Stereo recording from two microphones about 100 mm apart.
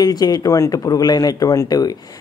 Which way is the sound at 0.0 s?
40° left (ahead or behind).